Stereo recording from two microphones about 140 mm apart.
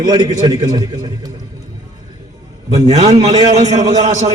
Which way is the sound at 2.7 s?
30° right (ahead or behind).